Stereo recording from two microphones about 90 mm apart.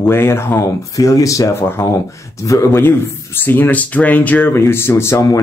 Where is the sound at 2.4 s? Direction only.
35° left (ahead or behind).